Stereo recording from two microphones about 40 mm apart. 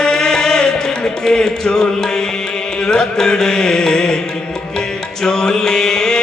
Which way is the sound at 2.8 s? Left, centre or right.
Centre.